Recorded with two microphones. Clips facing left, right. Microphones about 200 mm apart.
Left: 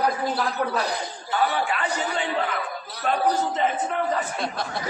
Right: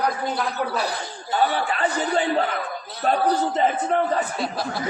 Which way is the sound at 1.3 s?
30° right (ahead or behind).